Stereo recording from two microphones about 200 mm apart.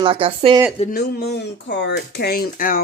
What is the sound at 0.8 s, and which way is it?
Speech, 45° left (ahead or behind).